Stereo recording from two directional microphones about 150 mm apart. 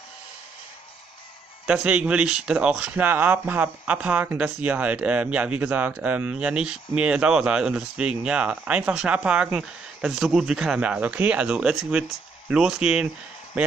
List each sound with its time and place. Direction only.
1.7 s speech: 5° right (ahead or behind)